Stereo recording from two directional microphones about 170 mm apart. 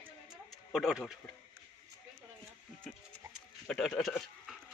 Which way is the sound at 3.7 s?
5° left (ahead or behind).